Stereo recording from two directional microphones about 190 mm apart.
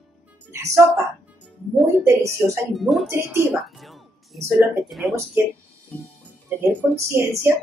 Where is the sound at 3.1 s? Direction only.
10° right (ahead or behind).